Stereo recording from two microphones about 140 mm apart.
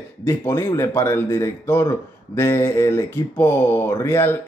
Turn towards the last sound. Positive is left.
turn(degrees=15)  # may be behind; listen again after turning